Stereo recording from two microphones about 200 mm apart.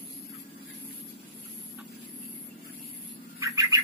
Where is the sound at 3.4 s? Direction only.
15° right (ahead or behind).